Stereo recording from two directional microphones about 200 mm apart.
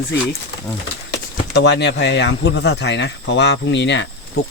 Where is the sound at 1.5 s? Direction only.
60° left (ahead or behind).